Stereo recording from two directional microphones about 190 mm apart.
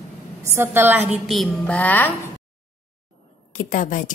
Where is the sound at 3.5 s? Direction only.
40° left (ahead or behind).